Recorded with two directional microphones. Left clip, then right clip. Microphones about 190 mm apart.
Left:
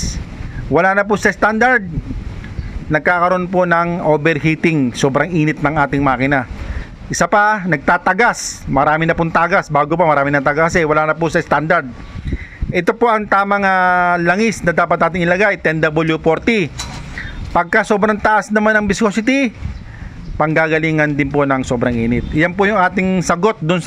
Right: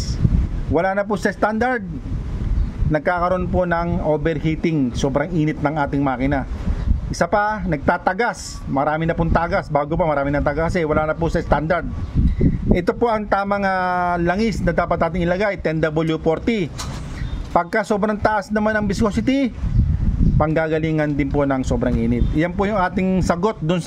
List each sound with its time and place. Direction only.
0.7 s speech: 15° left (ahead or behind)
2.9 s speech: 15° left (ahead or behind)